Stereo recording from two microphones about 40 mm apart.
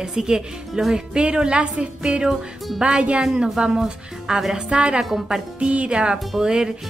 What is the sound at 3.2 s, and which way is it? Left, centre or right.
A woman's voice, centre.